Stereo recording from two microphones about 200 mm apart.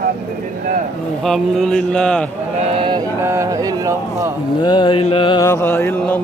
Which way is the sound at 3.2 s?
15° right (ahead or behind).